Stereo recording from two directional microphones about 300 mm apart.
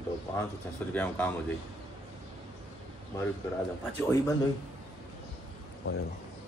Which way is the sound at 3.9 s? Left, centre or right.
Centre.